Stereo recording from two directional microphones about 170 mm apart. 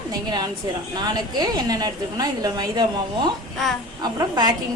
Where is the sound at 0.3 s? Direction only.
25° right (ahead or behind).